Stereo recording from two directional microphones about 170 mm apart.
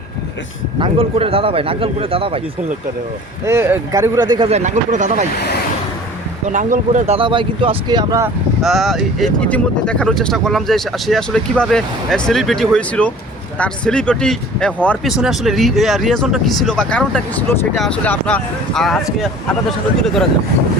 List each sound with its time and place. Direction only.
0.8 s speech: 35° right (ahead or behind)
3.4 s speech: 15° right (ahead or behind)
4.4 s speech: 40° right (ahead or behind)
5.3 s speech: 70° left (ahead or behind)
6.4 s speech: 50° right (ahead or behind)
7.2 s speech: 30° right (ahead or behind)
8.6 s speech: centre (ahead or behind)